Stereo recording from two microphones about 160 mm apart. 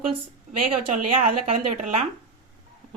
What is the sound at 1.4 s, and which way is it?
Speech, 45° right (ahead or behind).